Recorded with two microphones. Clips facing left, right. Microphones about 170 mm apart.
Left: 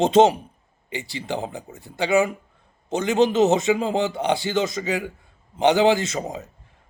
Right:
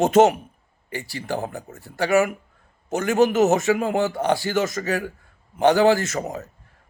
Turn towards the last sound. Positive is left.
turn(degrees=15)  # may be behind; listen again after turning